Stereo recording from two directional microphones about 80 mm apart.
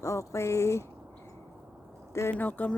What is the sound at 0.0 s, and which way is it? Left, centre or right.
Speech, left.